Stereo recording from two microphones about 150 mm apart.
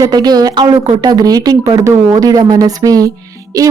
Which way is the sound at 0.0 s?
25° right (ahead or behind).